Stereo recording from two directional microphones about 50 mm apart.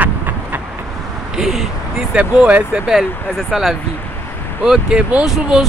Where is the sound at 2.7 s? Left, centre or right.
Centre.